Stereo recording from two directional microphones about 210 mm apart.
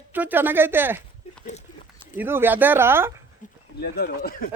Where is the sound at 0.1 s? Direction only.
10° right (ahead or behind).